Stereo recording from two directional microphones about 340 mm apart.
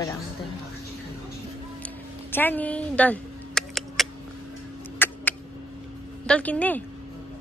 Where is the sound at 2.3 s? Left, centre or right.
Centre.